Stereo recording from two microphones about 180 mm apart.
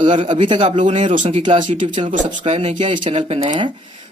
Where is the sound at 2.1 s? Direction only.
40° right (ahead or behind).